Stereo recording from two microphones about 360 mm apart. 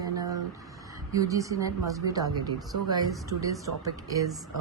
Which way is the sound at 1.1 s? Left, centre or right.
Centre.